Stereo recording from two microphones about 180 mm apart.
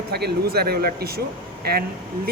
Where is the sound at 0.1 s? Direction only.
60° right (ahead or behind).